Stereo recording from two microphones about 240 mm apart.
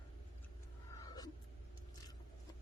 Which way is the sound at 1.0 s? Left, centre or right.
Centre.